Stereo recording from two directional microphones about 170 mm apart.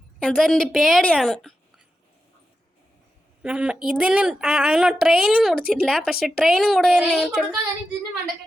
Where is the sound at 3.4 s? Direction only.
5° right (ahead or behind).